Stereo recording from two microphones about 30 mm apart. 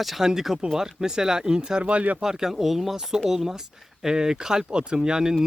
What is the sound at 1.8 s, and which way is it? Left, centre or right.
Speech, right.